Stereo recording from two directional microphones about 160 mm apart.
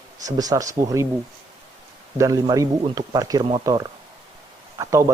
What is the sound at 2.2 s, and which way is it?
A man's voice, 20° right (ahead or behind).